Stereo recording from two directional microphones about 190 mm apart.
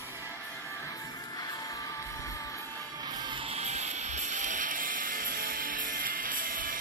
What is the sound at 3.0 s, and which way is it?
Music, 20° right (ahead or behind).